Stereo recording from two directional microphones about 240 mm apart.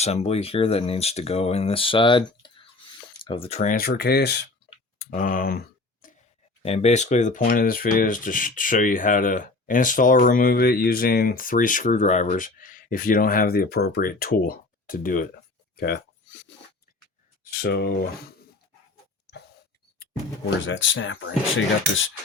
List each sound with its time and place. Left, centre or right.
0.0 s speech: left
4.7 s clicking: left
6.6 s speech: left
15.7 s a sound: left
17.4 s a sound: left
20.7 s speech: left